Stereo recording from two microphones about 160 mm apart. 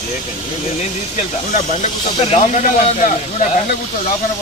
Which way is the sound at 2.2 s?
45° left (ahead or behind).